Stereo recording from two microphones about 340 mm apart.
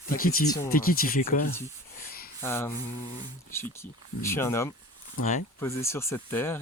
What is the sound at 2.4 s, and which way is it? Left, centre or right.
Speech, centre.